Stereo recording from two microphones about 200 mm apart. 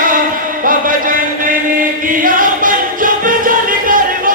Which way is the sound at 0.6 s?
45° right (ahead or behind).